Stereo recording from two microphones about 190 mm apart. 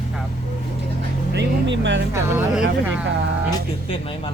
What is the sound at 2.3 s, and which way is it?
Speech, 5° right (ahead or behind).